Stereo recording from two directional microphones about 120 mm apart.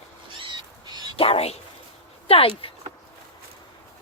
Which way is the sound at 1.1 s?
55° left (ahead or behind).